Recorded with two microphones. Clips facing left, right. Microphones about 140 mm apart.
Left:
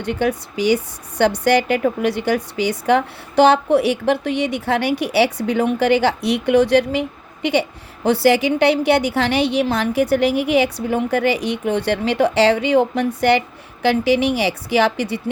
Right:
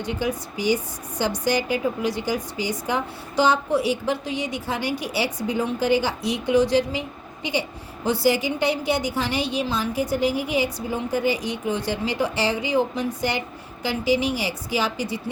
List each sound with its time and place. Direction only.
0.0 s a woman's voice: 65° left (ahead or behind)